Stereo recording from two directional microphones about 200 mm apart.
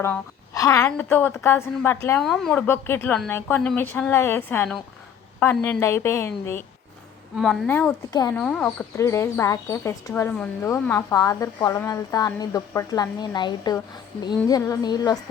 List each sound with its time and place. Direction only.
0.0 s speech: 15° left (ahead or behind)
7.3 s speech: centre (ahead or behind)
8.1 s a woman's voice: 20° left (ahead or behind)
8.4 s a woman's voice: 5° left (ahead or behind)